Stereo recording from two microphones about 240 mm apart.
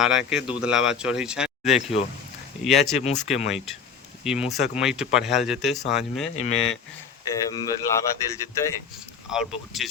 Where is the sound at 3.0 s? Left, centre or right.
Left.